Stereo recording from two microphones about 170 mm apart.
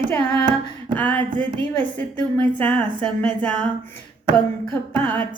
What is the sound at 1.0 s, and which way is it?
A woman's voice, 10° left (ahead or behind).